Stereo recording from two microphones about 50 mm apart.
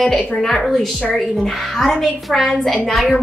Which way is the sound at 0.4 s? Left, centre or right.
Centre.